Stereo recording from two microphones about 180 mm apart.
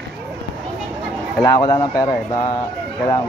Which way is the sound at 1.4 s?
20° left (ahead or behind).